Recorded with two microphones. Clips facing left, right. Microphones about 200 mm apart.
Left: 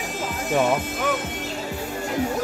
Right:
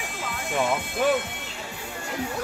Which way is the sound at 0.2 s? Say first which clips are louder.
Left 5 dB; 40° left (ahead or behind).